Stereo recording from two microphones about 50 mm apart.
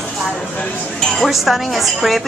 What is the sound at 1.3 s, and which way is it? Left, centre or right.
Speech, centre.